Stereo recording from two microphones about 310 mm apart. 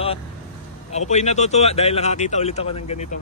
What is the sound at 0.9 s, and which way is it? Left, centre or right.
Speech, left.